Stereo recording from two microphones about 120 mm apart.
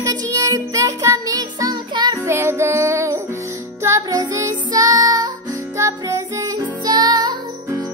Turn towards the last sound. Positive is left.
turn(degrees=-35)  # may be behind; listen again after turning